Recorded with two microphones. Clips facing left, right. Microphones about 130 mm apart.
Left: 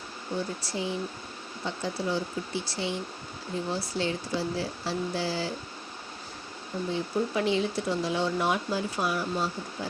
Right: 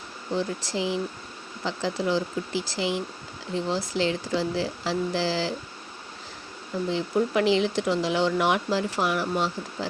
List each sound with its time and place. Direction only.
0.3 s speech: 90° right
6.9 s speech: 90° right